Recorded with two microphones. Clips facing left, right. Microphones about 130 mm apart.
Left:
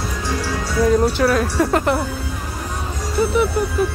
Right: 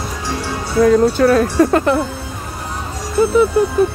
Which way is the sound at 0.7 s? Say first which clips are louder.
Right 5 dB; 55° right (ahead or behind).